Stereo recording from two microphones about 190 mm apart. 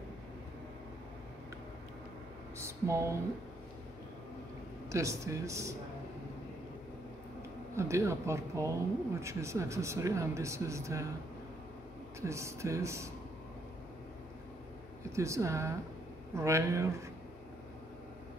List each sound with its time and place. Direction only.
2.6 s speech: 15° right (ahead or behind)
4.8 s speech: 15° right (ahead or behind)
7.7 s speech: 15° right (ahead or behind)
12.2 s speech: 15° right (ahead or behind)
15.1 s speech: 15° right (ahead or behind)